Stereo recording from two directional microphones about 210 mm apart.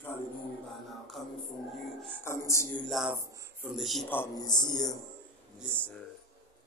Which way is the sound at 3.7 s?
Centre (ahead or behind).